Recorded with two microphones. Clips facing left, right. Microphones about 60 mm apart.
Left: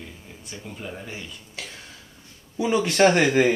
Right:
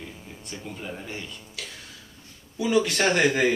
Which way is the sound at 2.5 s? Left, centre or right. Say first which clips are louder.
Left 2 dB; left.